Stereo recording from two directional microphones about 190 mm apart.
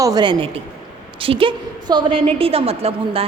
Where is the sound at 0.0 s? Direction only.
20° right (ahead or behind).